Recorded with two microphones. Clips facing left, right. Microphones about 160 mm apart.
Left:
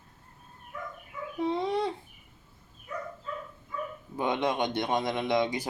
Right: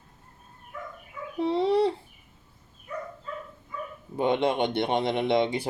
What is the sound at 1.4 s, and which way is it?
Fowl, 30° right (ahead or behind).